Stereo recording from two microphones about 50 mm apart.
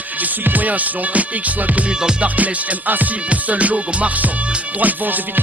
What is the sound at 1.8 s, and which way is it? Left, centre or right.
Music, right.